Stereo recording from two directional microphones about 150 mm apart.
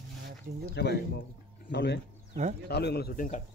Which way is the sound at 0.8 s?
90° left.